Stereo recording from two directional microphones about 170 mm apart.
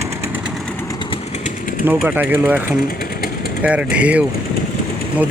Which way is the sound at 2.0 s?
10° right (ahead or behind).